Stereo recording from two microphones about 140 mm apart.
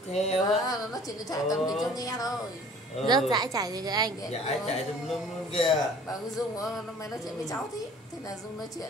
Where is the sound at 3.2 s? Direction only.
30° right (ahead or behind).